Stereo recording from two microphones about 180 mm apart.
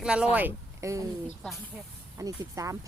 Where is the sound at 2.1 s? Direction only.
20° right (ahead or behind).